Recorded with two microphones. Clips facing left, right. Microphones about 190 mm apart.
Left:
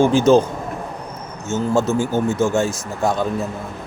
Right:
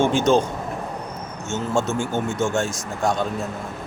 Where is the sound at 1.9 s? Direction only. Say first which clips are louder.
Left 5 dB; 35° left (ahead or behind).